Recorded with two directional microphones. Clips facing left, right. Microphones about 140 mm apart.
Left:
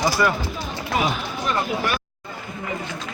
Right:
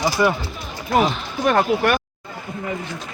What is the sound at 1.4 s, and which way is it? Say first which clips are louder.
Speech: right 8 dB; 60° right (ahead or behind).